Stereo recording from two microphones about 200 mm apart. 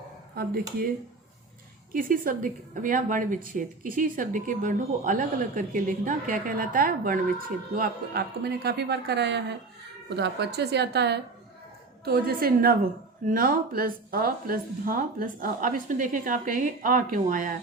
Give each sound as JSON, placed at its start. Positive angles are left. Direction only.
{"t": 0.4, "sound": "speech", "side_deg": -50}
{"t": 1.9, "sound": "a woman's voice", "side_deg": -45}